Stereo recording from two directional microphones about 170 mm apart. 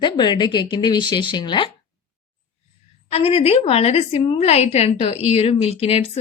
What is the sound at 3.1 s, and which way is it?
A woman's voice, 35° left (ahead or behind).